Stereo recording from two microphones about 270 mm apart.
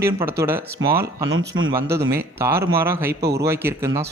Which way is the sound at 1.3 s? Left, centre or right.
Right.